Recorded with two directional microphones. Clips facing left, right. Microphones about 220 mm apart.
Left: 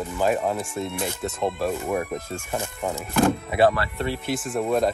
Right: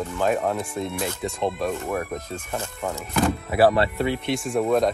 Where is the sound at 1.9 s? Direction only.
20° left (ahead or behind).